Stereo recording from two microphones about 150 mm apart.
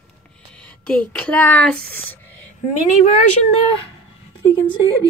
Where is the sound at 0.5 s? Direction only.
10° left (ahead or behind).